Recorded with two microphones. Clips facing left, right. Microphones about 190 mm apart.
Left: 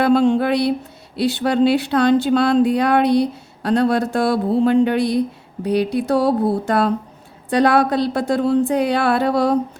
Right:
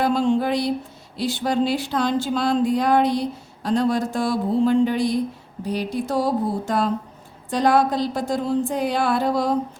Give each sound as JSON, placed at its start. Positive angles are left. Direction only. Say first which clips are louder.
{"t": 0.0, "sound": "a woman's voice", "louder": "left 5 dB", "side_deg": 65}